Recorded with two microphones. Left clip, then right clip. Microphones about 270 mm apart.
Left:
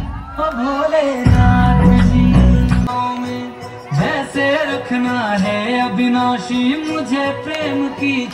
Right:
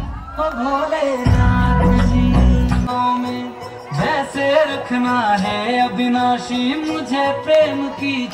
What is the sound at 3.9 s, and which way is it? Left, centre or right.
Music, right.